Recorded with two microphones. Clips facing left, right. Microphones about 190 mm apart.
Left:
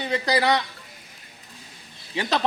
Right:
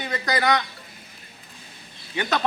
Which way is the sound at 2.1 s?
30° left (ahead or behind).